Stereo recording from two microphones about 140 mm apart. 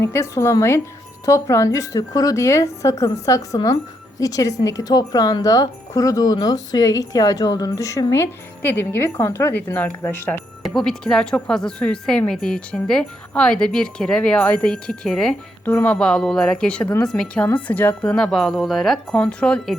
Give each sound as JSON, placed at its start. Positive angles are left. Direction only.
{"t": 0.0, "sound": "speech", "side_deg": 20}
{"t": 10.6, "sound": "speech", "side_deg": 5}